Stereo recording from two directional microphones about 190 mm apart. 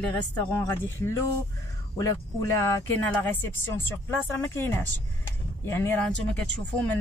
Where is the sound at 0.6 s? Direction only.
15° left (ahead or behind).